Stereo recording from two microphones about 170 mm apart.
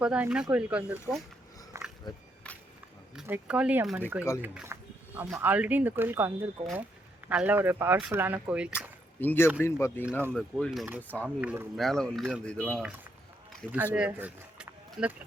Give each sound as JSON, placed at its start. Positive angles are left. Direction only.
{"t": 0.0, "sound": "speech", "side_deg": -5}
{"t": 1.7, "sound": "a sound", "side_deg": -15}
{"t": 3.2, "sound": "speech", "side_deg": -10}
{"t": 9.2, "sound": "speech", "side_deg": 10}
{"t": 10.1, "sound": "speech", "side_deg": -15}
{"t": 10.3, "sound": "speech", "side_deg": 0}
{"t": 11.3, "sound": "speech", "side_deg": -10}
{"t": 11.9, "sound": "speech", "side_deg": 5}
{"t": 13.7, "sound": "speech", "side_deg": -10}